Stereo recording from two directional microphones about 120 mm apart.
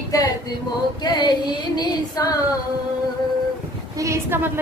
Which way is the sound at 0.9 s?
35° left (ahead or behind).